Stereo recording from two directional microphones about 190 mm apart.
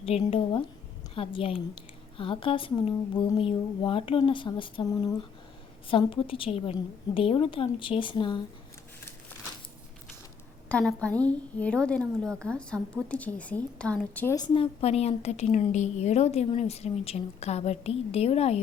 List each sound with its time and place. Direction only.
0.0 s a woman's voice: 30° left (ahead or behind)
10.7 s a woman's voice: 5° left (ahead or behind)
14.3 s a woman's voice: 25° left (ahead or behind)